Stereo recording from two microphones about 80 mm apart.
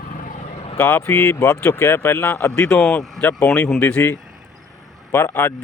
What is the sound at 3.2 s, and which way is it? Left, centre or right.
Speech, left.